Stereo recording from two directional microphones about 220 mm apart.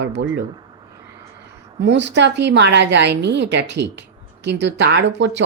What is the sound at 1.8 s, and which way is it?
A woman's voice, 55° right (ahead or behind).